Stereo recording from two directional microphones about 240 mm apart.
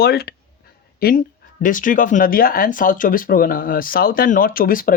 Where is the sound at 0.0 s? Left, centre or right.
Left.